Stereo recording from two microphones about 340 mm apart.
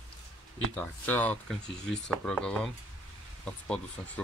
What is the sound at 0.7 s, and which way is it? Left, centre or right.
Speech, centre.